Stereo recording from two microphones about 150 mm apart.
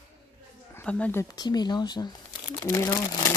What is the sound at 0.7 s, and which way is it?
Speech, 10° left (ahead or behind).